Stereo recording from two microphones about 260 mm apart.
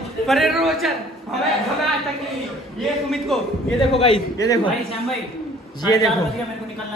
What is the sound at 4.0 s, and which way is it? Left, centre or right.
Speech, centre.